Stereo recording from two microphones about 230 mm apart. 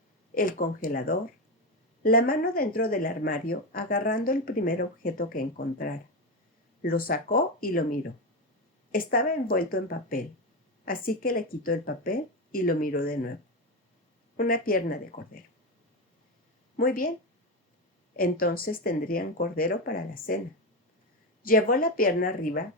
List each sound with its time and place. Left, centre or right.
0.3 s speech: left
14.3 s speech: left
16.7 s speech: left
18.2 s speech: left
21.4 s speech: left